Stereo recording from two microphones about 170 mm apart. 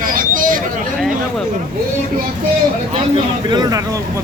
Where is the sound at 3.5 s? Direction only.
25° right (ahead or behind).